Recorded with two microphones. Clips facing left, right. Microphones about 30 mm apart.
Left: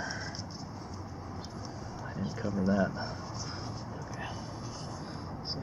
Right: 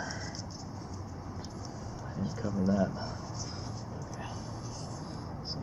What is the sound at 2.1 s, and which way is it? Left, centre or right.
Run, left.